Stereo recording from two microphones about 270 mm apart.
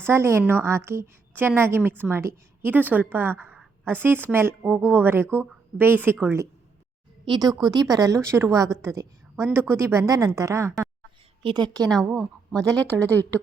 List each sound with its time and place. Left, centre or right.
0.0 s a woman's voice: centre
12.0 s a woman's voice: centre